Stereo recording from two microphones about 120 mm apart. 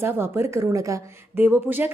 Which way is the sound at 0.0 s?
20° right (ahead or behind).